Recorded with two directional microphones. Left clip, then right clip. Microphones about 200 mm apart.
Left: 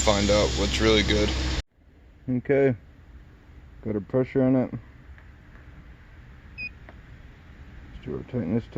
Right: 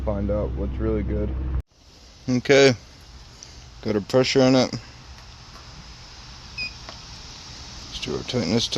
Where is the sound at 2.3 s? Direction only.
20° right (ahead or behind).